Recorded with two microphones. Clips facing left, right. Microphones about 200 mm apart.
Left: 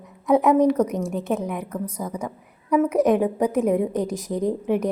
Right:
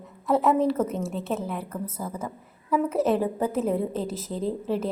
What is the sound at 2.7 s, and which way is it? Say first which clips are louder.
A woman's voice: left 5 dB; 15° left (ahead or behind).